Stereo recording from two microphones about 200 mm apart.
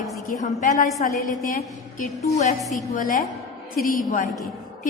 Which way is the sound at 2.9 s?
45° left (ahead or behind).